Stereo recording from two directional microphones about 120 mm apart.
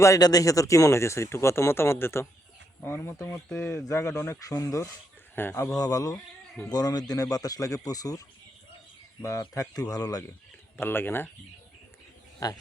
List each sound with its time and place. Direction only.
0.0 s a man's voice: 30° left (ahead or behind)
5.7 s speech: 30° left (ahead or behind)
9.2 s speech: 25° left (ahead or behind)
10.8 s speech: 20° left (ahead or behind)
12.4 s speech: 30° left (ahead or behind)